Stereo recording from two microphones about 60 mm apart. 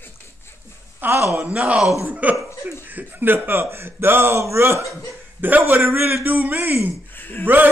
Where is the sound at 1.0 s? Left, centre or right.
Right.